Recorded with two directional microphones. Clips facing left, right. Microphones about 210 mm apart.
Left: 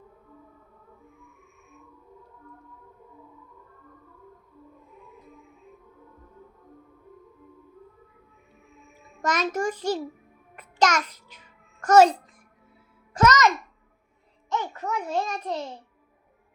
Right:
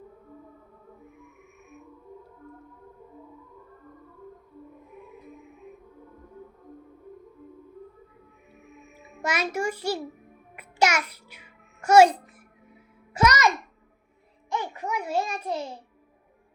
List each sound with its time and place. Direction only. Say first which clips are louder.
1.0 s music: right 4 dB; 20° right (ahead or behind)
8.6 s music: right 5 dB; 20° right (ahead or behind)
9.2 s a child's voice: left 2 dB; 10° right (ahead or behind)
10.5 s music: left 1 dB; 10° right (ahead or behind)
13.1 s music: left 2 dB; 10° right (ahead or behind)
14.5 s a sound: left 1 dB; 10° right (ahead or behind)